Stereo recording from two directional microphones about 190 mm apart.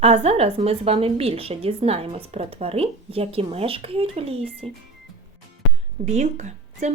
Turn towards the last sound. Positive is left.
turn(degrees=-40)  # may be behind; listen again after turning